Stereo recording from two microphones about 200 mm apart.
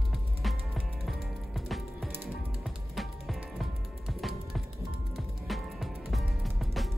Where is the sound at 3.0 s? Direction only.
Centre (ahead or behind).